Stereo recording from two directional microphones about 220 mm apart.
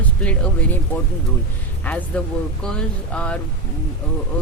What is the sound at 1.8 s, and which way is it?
Speech, 5° left (ahead or behind).